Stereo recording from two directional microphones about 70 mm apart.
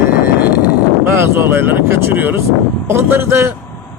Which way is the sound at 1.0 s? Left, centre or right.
Right.